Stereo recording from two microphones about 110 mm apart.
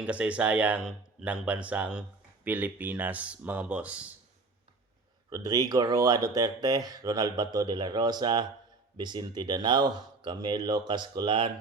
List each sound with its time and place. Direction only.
0.0 s speech: 10° right (ahead or behind)
5.3 s speech: 35° right (ahead or behind); by 11.5 s 50° right (ahead or behind)